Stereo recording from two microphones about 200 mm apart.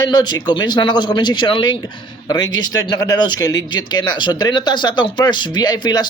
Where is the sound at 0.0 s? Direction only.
20° left (ahead or behind).